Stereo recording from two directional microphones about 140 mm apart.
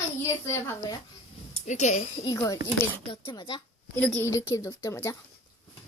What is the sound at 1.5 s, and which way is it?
Speech, 55° left (ahead or behind).